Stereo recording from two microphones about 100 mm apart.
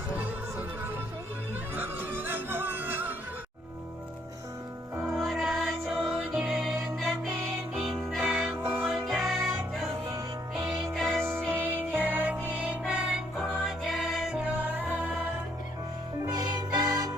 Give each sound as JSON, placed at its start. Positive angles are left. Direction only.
{"t": 1.7, "sound": "music", "side_deg": -20}
{"t": 5.1, "sound": "music", "side_deg": -5}
{"t": 11.2, "sound": "music", "side_deg": -25}
{"t": 16.2, "sound": "music", "side_deg": -40}